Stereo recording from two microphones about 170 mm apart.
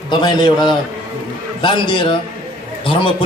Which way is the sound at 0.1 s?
25° left (ahead or behind).